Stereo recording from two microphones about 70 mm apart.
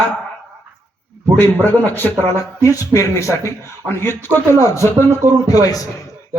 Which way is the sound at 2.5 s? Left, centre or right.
Left.